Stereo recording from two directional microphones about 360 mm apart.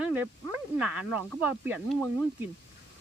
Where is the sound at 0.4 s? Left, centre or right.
Centre.